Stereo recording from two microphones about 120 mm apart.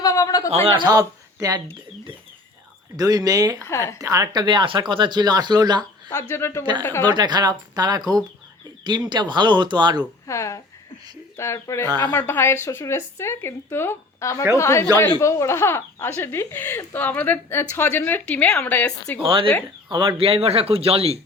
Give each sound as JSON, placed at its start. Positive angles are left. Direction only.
{"t": 0.0, "sound": "a sound", "side_deg": 30}
{"t": 0.5, "sound": "speech", "side_deg": -50}
{"t": 2.9, "sound": "speech", "side_deg": -35}
{"t": 3.7, "sound": "speech", "side_deg": 25}
{"t": 4.0, "sound": "speech", "side_deg": -25}
{"t": 6.1, "sound": "speech", "side_deg": 20}
{"t": 6.6, "sound": "speech", "side_deg": -40}
{"t": 6.8, "sound": "speech", "side_deg": 20}
{"t": 7.1, "sound": "speech", "side_deg": -35}
{"t": 10.2, "sound": "speech", "side_deg": 25}
{"t": 11.9, "sound": "speech", "side_deg": -35}
{"t": 12.1, "sound": "speech", "side_deg": 20}
{"t": 19.2, "sound": "speech", "side_deg": -45}